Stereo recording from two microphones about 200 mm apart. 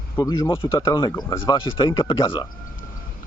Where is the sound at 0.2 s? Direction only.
15° left (ahead or behind).